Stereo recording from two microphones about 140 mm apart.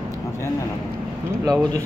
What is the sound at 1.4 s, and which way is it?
Speech, 25° right (ahead or behind).